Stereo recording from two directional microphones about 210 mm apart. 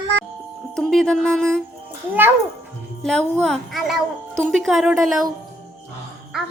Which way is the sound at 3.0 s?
5° left (ahead or behind).